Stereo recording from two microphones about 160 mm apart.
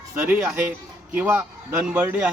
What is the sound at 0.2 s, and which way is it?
A man's voice, 5° right (ahead or behind).